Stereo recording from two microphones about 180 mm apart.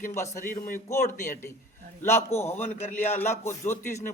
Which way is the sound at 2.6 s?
40° left (ahead or behind).